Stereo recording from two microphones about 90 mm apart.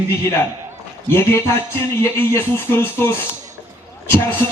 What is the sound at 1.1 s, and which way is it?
A man's voice, 25° left (ahead or behind).